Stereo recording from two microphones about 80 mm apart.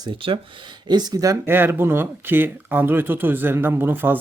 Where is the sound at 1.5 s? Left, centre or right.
Right.